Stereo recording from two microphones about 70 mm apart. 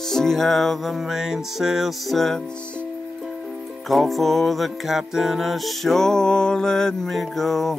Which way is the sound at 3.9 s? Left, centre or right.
Centre.